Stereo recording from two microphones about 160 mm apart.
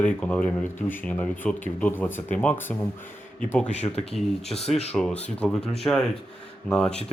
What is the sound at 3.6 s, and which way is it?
Speech, 45° left (ahead or behind).